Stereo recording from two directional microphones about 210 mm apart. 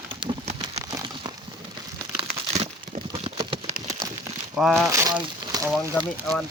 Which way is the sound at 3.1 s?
30° right (ahead or behind).